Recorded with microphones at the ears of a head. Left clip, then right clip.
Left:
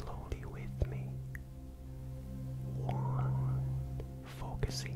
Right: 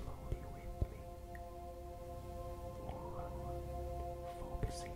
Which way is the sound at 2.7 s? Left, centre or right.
Left.